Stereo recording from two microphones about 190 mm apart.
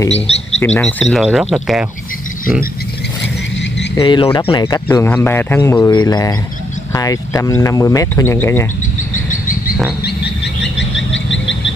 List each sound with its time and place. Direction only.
0.1 s speech: 35° left (ahead or behind)
0.7 s speech: 5° left (ahead or behind)
3.9 s speech: 20° left (ahead or behind)
4.8 s speech: 10° left (ahead or behind)
10.0 s a sound: 65° left (ahead or behind); by 11.7 s 80° left